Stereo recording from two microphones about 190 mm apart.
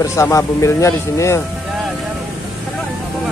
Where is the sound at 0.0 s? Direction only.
15° left (ahead or behind).